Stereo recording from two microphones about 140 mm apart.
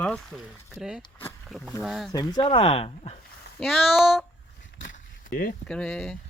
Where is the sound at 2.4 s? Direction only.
45° left (ahead or behind).